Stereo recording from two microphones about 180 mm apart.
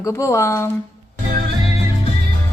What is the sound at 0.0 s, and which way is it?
Speech, 15° left (ahead or behind).